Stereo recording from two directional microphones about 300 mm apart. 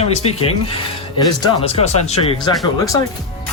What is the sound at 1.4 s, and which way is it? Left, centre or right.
Speech, centre.